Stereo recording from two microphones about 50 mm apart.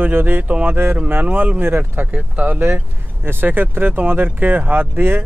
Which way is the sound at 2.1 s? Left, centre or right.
Right.